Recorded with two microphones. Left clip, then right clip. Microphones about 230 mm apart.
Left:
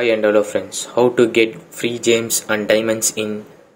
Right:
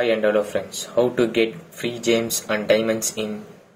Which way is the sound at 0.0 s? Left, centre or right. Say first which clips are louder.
Left 4 dB; left.